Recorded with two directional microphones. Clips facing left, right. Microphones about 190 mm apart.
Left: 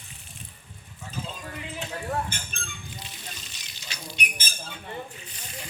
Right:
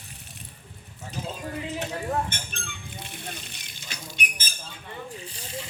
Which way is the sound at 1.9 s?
15° right (ahead or behind).